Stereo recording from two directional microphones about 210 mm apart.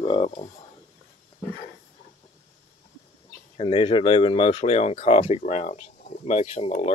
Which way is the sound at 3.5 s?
25° left (ahead or behind).